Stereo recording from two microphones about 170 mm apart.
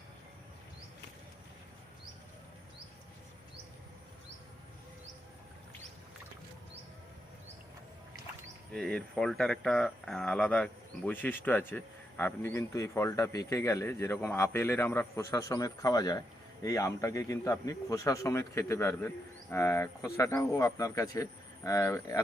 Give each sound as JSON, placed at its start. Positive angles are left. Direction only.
{"t": 8.7, "sound": "a man's voice", "side_deg": 5}